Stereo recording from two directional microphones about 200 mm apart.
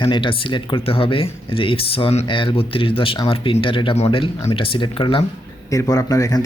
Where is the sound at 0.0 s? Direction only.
25° left (ahead or behind).